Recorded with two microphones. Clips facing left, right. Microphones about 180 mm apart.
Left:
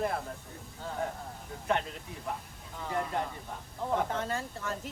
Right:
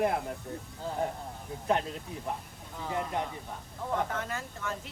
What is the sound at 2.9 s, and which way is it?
Speech, 15° right (ahead or behind).